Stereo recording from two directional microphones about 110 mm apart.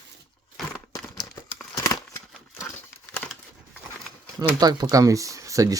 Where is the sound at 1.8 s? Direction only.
25° left (ahead or behind).